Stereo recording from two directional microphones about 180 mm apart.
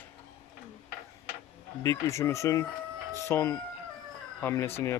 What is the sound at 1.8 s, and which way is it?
Speech, 15° left (ahead or behind).